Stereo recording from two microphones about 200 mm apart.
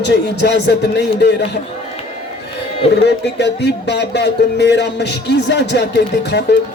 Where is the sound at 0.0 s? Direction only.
60° left (ahead or behind).